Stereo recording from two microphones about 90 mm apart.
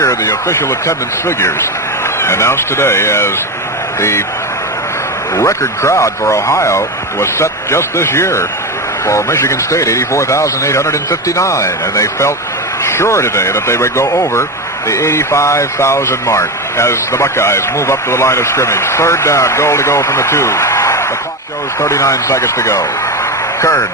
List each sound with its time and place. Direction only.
0.0 s speech: 35° left (ahead or behind)
2.2 s speech: 30° left (ahead or behind)
5.4 s speech: 30° left (ahead or behind)